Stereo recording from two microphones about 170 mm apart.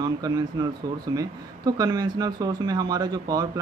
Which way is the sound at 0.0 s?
20° right (ahead or behind).